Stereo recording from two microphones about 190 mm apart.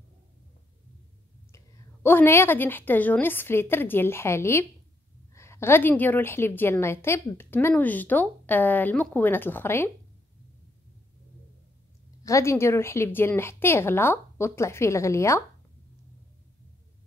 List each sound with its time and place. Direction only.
2.0 s a woman's voice: 10° left (ahead or behind)
12.2 s a woman's voice: 15° left (ahead or behind)